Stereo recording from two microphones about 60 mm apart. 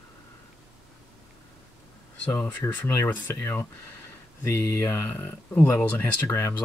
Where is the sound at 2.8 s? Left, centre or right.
Left.